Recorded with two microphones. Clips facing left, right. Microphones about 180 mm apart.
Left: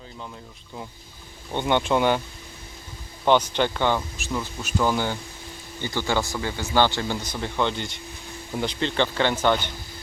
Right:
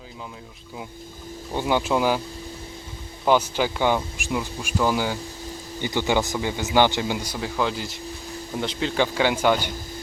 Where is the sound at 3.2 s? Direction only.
5° right (ahead or behind).